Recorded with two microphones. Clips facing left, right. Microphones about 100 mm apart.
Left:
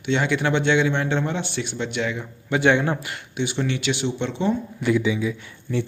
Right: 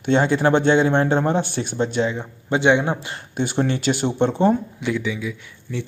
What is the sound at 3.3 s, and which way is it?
Speech, 45° right (ahead or behind).